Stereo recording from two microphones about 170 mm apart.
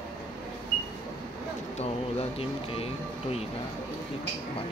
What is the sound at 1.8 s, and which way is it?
Speech, 35° left (ahead or behind).